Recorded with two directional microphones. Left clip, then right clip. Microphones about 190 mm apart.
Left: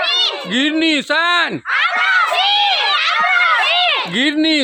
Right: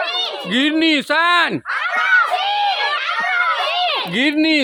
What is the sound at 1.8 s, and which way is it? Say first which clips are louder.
Cat: left 1 dB; 50° left (ahead or behind).